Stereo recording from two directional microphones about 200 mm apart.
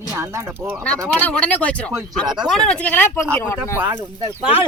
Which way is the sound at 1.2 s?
10° left (ahead or behind).